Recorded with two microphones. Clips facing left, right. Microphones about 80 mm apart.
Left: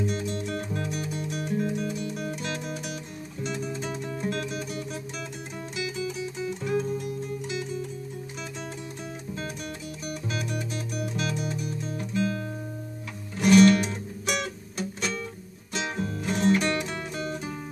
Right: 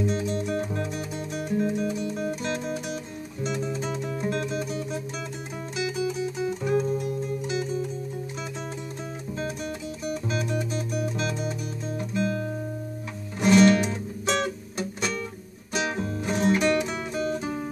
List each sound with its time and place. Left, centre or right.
0.0 s music: right
10.0 s music: right